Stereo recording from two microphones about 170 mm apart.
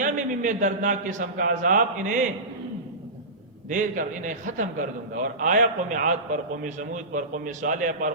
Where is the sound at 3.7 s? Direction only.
50° right (ahead or behind).